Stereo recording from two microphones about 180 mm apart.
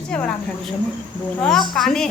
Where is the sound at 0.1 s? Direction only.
5° left (ahead or behind).